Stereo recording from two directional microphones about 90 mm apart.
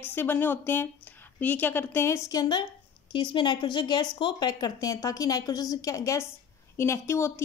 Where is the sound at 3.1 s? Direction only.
60° left (ahead or behind).